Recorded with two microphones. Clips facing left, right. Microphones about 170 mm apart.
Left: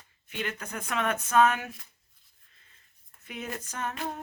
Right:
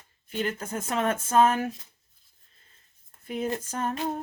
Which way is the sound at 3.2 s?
35° right (ahead or behind).